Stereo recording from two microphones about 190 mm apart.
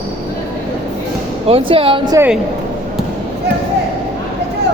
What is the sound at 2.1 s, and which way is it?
Speech, 10° right (ahead or behind).